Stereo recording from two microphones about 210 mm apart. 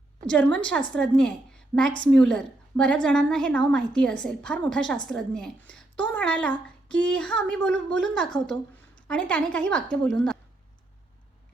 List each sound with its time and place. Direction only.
0.3 s speech: 5° left (ahead or behind)